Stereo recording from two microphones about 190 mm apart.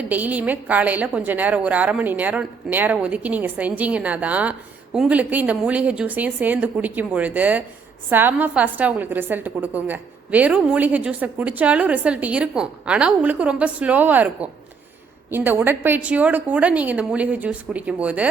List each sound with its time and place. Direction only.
0.0 s a woman's voice: 10° right (ahead or behind)